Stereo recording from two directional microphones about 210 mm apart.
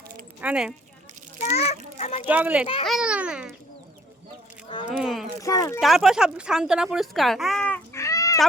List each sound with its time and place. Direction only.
0.4 s a child's voice: 5° right (ahead or behind)
1.4 s a child's voice: 30° left (ahead or behind)
2.2 s a child's voice: 10° right (ahead or behind)
4.9 s a child's voice: centre (ahead or behind)
5.4 s speech: 15° left (ahead or behind)
5.8 s speech: centre (ahead or behind); by 8.4 s 15° left (ahead or behind)